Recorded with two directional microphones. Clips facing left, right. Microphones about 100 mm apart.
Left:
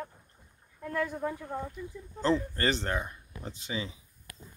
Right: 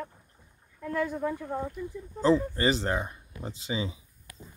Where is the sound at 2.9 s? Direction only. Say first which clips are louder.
Right 3 dB; 25° right (ahead or behind).